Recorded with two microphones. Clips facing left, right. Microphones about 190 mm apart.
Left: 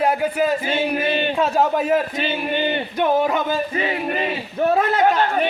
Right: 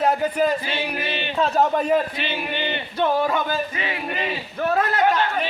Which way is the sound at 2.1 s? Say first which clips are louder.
Left 5 dB; 45° left (ahead or behind).